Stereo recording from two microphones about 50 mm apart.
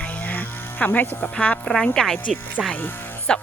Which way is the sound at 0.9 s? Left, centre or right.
Left.